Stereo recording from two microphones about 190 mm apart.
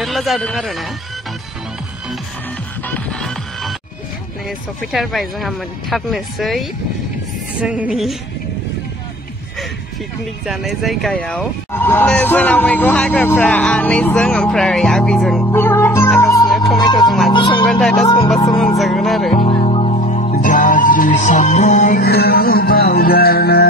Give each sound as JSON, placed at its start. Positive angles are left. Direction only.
{"t": 0.0, "sound": "speech", "side_deg": 0}
{"t": 2.9, "sound": "music", "side_deg": 5}
{"t": 4.5, "sound": "speech", "side_deg": 0}
{"t": 10.4, "sound": "speech", "side_deg": 0}
{"t": 16.2, "sound": "music", "side_deg": 15}
{"t": 16.4, "sound": "music", "side_deg": 0}
{"t": 17.6, "sound": "speech", "side_deg": 5}
{"t": 18.0, "sound": "speech", "side_deg": 25}
{"t": 18.8, "sound": "speech", "side_deg": 0}
{"t": 19.3, "sound": "music", "side_deg": 30}
{"t": 22.0, "sound": "music", "side_deg": 55}